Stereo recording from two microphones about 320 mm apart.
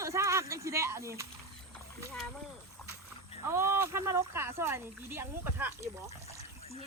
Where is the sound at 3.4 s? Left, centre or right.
Centre.